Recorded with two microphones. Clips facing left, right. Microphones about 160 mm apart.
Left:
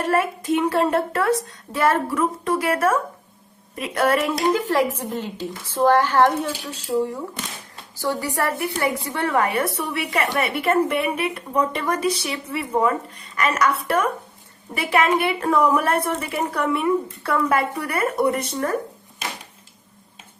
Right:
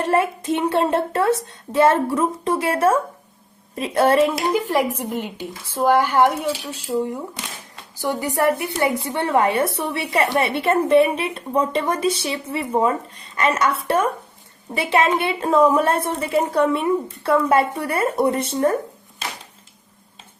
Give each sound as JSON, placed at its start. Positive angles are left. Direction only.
{"t": 0.0, "sound": "a woman's voice", "side_deg": -25}
{"t": 4.5, "sound": "a woman's voice", "side_deg": -15}